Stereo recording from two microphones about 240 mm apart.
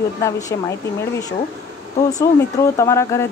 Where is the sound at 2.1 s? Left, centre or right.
Centre.